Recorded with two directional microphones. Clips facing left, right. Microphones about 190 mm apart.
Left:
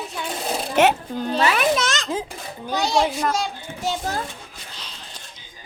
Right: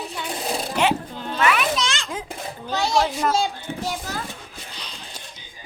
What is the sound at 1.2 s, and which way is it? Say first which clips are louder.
Speech: left 2 dB; 35° left (ahead or behind).